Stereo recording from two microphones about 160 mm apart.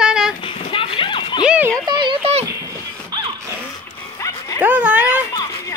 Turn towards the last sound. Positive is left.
turn(degrees=-10)  # may be behind; listen again after turning